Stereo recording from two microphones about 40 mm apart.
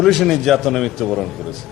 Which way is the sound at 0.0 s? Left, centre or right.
Centre.